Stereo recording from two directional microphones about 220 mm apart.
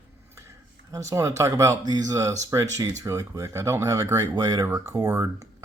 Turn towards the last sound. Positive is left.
turn(degrees=-15)  # may be behind; listen again after turning